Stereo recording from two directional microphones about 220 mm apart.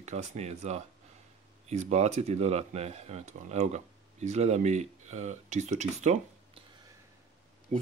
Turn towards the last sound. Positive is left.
turn(degrees=-35)  # may be behind; listen again after turning